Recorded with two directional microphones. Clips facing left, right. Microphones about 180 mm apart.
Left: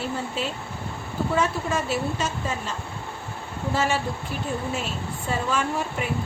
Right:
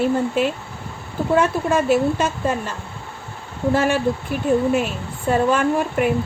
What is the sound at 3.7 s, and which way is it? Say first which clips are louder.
Speech: right 5 dB; 55° right (ahead or behind).